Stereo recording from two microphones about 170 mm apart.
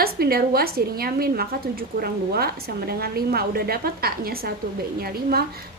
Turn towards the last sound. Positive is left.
turn(degrees=-65)  # may be behind; listen again after turning